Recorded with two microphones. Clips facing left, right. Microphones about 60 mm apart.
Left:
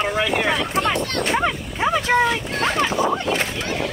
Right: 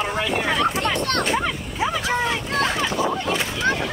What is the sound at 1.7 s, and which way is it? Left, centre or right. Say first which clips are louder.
Vehicle: left 5 dB; left.